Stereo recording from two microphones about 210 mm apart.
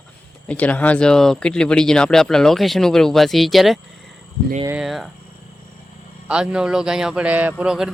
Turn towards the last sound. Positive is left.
turn(degrees=-5)  # may be behind; listen again after turning